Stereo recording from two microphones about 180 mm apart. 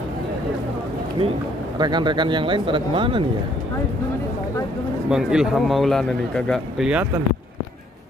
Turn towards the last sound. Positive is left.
turn(degrees=-5)  # may be behind; listen again after turning